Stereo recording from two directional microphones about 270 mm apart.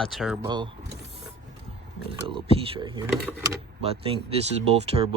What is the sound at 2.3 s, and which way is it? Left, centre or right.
Speech, centre.